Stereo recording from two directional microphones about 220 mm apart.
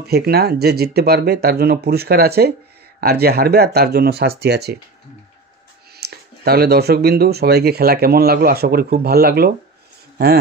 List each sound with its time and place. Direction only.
0.0 s speech: 45° right (ahead or behind)
5.9 s speech: 45° right (ahead or behind)